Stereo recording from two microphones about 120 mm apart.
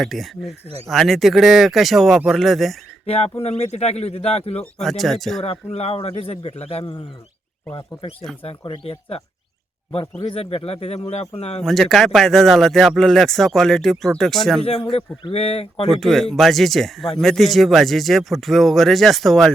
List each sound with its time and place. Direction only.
0.0 s speech: centre (ahead or behind)
3.1 s a man's voice: 55° left (ahead or behind)
4.6 s speech: centre (ahead or behind)
5.4 s a man's voice: 60° left (ahead or behind)
8.4 s speech: 45° left (ahead or behind)
10.2 s a man's voice: 50° left (ahead or behind)
11.6 s speech: centre (ahead or behind)
14.6 s speech: 50° left (ahead or behind)
15.9 s speech: centre (ahead or behind)